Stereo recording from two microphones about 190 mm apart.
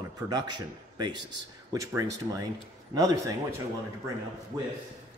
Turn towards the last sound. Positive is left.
turn(degrees=-25)  # may be behind; listen again after turning